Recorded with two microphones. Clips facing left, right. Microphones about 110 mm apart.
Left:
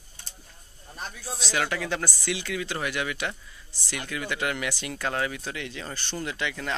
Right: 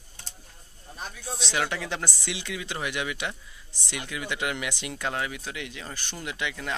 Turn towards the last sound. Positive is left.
turn(degrees=-10)  # may be behind; listen again after turning